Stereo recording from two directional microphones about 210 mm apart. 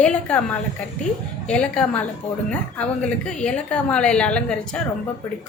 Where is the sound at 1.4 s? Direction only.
5° left (ahead or behind).